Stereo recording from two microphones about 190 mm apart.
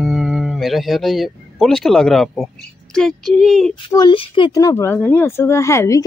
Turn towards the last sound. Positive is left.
turn(degrees=15)  # may be behind; listen again after turning